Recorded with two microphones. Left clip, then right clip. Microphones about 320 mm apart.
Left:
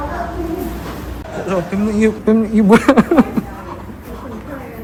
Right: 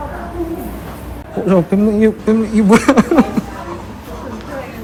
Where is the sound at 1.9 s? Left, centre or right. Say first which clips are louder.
Left 2 dB; centre.